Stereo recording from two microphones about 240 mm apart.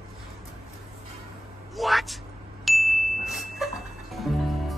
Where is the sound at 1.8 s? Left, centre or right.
Centre.